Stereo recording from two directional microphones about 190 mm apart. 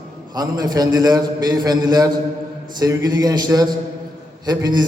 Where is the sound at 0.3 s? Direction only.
20° right (ahead or behind).